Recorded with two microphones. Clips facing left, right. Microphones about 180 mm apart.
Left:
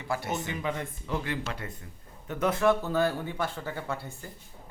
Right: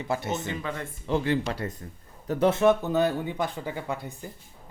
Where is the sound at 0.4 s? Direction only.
15° left (ahead or behind).